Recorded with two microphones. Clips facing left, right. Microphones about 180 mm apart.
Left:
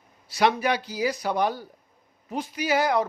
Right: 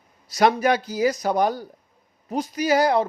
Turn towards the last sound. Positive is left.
turn(degrees=-35)  # may be behind; listen again after turning